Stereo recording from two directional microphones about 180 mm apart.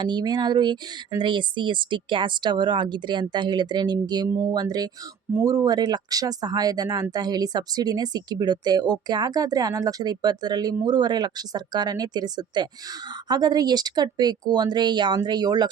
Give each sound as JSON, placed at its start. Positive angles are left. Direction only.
{"t": 0.0, "sound": "speech", "side_deg": -25}